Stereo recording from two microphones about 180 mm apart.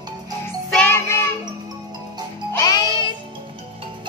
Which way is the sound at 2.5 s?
20° left (ahead or behind).